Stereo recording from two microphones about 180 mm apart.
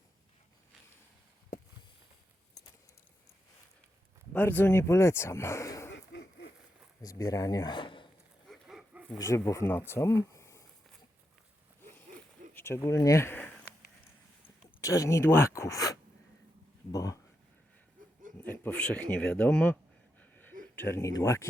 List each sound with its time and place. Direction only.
4.3 s speech: 10° left (ahead or behind)
6.1 s a sound: 75° left (ahead or behind)
7.0 s speech: 20° left (ahead or behind)
8.4 s dog: centre (ahead or behind)
9.1 s speech: 15° left (ahead or behind)
12.5 s a sound: 15° left (ahead or behind)
14.8 s speech: 20° left (ahead or behind)
18.4 s speech: 5° left (ahead or behind)
20.1 s a sound: 10° left (ahead or behind)
20.9 s speech: 15° left (ahead or behind)